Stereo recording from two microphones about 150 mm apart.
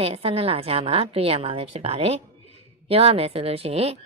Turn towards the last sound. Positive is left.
turn(degrees=-45)  # may be behind; listen again after turning